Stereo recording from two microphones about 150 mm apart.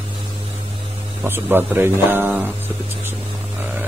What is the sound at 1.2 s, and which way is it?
Speech, 15° right (ahead or behind).